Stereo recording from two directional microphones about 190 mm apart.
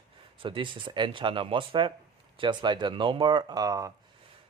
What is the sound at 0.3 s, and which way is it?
Speech, 25° right (ahead or behind).